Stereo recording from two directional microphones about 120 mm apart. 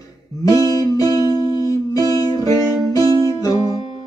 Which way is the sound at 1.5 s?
30° left (ahead or behind).